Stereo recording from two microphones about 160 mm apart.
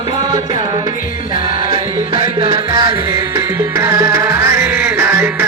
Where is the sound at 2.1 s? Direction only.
30° right (ahead or behind); by 5.4 s 15° right (ahead or behind).